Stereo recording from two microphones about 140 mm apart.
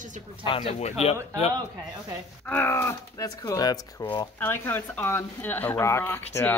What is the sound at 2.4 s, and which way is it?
Speech, 15° left (ahead or behind).